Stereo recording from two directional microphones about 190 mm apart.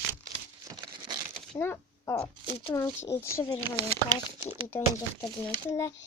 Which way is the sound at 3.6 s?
25° right (ahead or behind).